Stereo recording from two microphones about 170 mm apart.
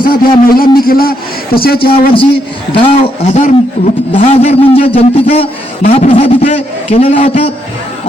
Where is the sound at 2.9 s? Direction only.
40° left (ahead or behind).